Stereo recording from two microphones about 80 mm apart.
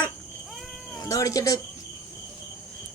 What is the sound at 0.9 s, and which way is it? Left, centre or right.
Speech, left.